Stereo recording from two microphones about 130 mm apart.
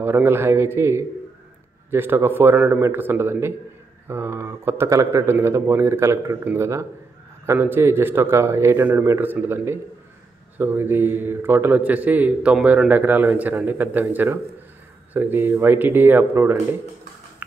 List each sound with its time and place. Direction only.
0.0 s a man's voice: 20° right (ahead or behind)
17.4 s music: 15° right (ahead or behind)